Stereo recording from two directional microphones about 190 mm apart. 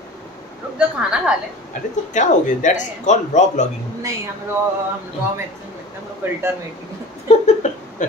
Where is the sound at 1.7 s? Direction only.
40° left (ahead or behind).